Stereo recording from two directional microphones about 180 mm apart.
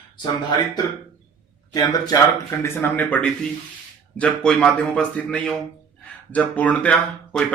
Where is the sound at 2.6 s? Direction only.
10° left (ahead or behind).